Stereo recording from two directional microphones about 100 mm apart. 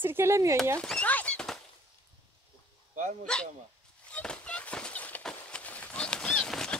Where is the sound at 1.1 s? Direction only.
10° left (ahead or behind).